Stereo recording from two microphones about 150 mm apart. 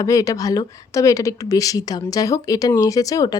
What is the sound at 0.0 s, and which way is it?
A woman's voice, 20° left (ahead or behind).